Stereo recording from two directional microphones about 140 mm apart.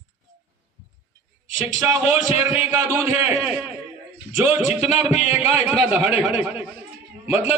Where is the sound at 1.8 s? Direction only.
10° right (ahead or behind).